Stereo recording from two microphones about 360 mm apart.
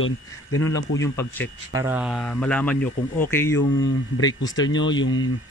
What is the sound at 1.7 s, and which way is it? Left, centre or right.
A man's voice, centre.